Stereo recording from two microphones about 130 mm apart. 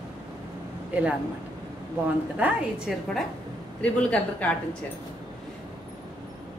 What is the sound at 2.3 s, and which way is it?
Speech, 10° right (ahead or behind).